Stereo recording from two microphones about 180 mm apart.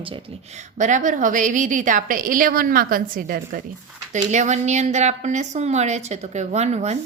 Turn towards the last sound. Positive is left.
turn(degrees=-40)  # may be behind; listen again after turning